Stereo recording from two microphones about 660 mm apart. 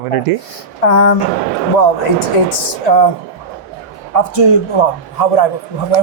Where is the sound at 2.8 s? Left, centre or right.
Left.